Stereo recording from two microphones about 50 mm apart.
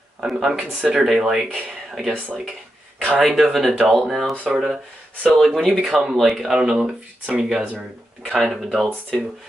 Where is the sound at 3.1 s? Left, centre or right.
Centre.